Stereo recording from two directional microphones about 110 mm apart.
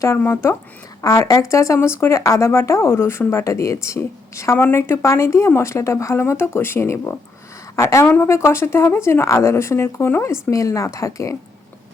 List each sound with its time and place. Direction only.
0.2 s speech: 25° left (ahead or behind)
8.0 s speech: 15° left (ahead or behind)
8.3 s speech: 25° left (ahead or behind)